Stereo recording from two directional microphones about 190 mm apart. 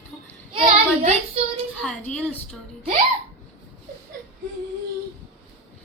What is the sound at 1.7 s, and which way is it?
Speech, 5° left (ahead or behind).